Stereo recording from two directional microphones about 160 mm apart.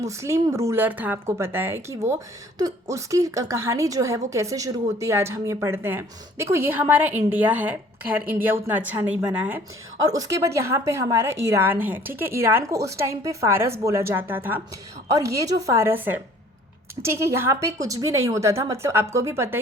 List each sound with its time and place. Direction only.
0.0 s a woman's voice: 20° right (ahead or behind)